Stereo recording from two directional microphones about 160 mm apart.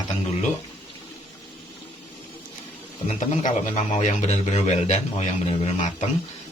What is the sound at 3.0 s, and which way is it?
A man's voice, 45° left (ahead or behind).